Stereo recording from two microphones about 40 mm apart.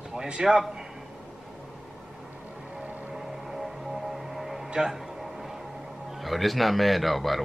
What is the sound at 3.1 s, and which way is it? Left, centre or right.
Music, centre.